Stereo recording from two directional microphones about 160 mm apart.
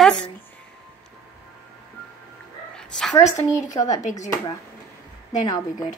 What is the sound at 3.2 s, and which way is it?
Speech, 45° left (ahead or behind).